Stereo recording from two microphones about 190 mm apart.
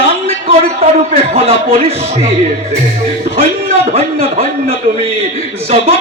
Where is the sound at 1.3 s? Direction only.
30° right (ahead or behind).